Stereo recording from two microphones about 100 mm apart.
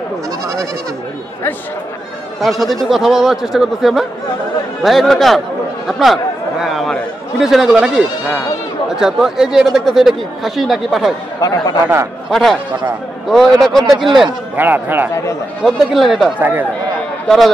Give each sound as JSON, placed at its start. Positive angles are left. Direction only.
{"t": 2.4, "sound": "speech", "side_deg": 0}
{"t": 11.4, "sound": "speech", "side_deg": 40}
{"t": 12.3, "sound": "speech", "side_deg": 0}
{"t": 13.8, "sound": "speech", "side_deg": -50}
{"t": 14.6, "sound": "speech", "side_deg": -20}
{"t": 15.6, "sound": "speech", "side_deg": 0}
{"t": 16.3, "sound": "speech", "side_deg": -15}